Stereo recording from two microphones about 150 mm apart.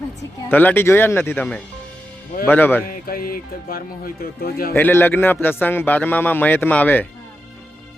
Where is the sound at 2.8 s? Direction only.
75° left (ahead or behind).